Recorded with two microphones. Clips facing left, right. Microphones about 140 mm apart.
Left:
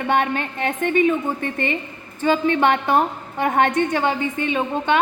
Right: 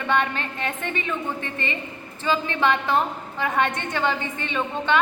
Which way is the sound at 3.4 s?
20° left (ahead or behind).